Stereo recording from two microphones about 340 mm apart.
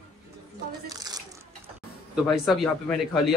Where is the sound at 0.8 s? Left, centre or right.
Centre.